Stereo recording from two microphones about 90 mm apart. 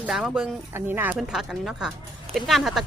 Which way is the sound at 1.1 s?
5° right (ahead or behind).